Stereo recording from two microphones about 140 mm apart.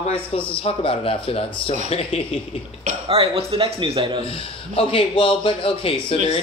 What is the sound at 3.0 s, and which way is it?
Speech, 40° right (ahead or behind).